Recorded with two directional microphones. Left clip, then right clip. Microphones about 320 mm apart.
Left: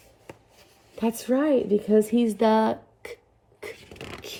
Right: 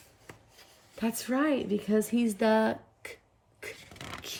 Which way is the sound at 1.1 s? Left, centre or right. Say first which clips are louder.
Left 6 dB; centre.